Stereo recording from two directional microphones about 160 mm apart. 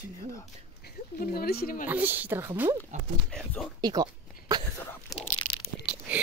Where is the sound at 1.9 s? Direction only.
10° right (ahead or behind).